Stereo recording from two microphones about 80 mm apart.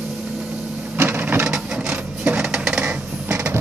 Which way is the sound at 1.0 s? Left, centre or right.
Right.